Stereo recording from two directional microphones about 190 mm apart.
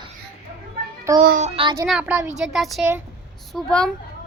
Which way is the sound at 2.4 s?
Centre (ahead or behind).